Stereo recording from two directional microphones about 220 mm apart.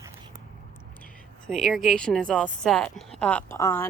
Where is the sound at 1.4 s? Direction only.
Centre (ahead or behind).